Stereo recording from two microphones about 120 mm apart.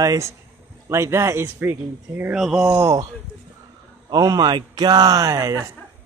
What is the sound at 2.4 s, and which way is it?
Speech, 5° right (ahead or behind).